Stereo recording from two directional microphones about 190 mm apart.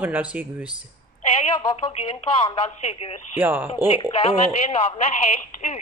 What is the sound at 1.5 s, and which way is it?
Speech, 30° left (ahead or behind).